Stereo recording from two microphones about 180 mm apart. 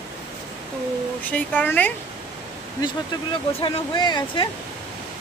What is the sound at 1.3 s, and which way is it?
Speech, 10° left (ahead or behind).